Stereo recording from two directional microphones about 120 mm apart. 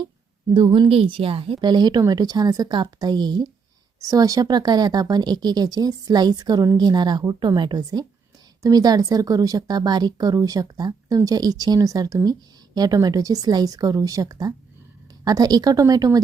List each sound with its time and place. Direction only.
0.5 s speech: 45° right (ahead or behind)